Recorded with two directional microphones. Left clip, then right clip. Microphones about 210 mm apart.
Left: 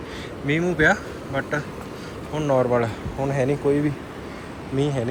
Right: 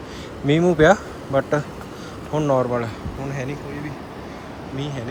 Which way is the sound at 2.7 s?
5° right (ahead or behind).